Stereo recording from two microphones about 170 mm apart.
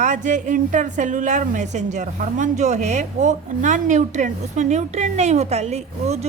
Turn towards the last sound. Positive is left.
turn(degrees=-40)  # may be behind; listen again after turning